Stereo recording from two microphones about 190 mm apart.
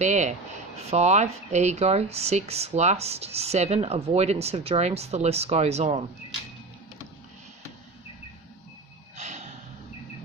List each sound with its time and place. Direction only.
0.0 s speech: 35° right (ahead or behind)
9.1 s gasp: 35° right (ahead or behind)